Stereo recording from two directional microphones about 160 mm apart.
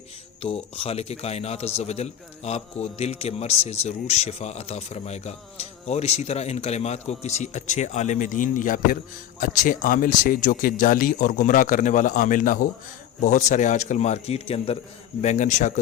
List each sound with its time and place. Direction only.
0.4 s a man's voice: 35° left (ahead or behind)